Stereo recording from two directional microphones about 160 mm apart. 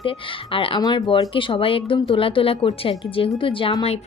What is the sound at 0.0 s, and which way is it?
A woman's voice, 35° left (ahead or behind).